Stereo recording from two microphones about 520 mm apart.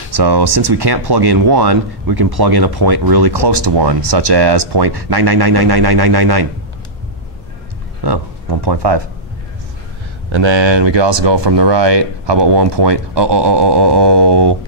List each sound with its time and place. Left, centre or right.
0.1 s speech: right
8.0 s speech: right
10.3 s speech: right